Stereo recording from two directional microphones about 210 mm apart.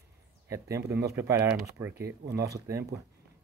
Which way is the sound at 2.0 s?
50° right (ahead or behind).